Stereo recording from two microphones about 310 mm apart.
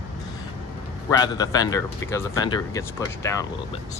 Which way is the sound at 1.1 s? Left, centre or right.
Centre.